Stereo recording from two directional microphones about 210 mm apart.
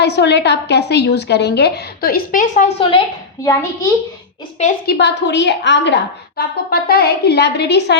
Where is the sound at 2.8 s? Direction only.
25° left (ahead or behind).